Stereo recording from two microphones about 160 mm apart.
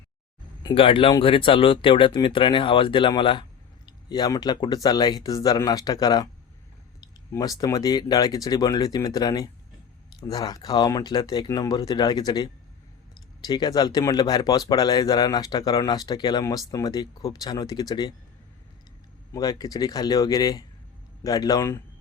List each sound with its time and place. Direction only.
0.6 s speech: 35° left (ahead or behind)
13.5 s speech: 25° left (ahead or behind)
19.3 s speech: 25° left (ahead or behind)